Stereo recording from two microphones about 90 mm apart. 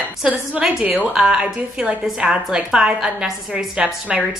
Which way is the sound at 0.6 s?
10° right (ahead or behind).